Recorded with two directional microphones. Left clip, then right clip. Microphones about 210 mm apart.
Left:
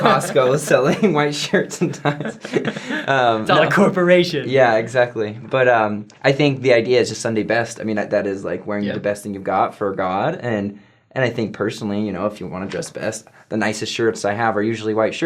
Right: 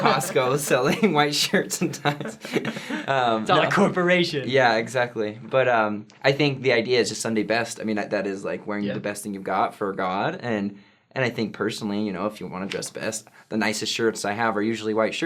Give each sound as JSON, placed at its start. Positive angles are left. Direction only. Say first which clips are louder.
{"t": 0.0, "sound": "speech", "louder": "left 6 dB", "side_deg": 20}
{"t": 1.1, "sound": "speech", "louder": "left 3 dB", "side_deg": 35}
{"t": 2.5, "sound": "speech", "louder": "left 5 dB", "side_deg": 30}
{"t": 3.4, "sound": "speech", "louder": "left 5 dB", "side_deg": -45}
{"t": 4.4, "sound": "speech", "louder": "left 5 dB", "side_deg": 25}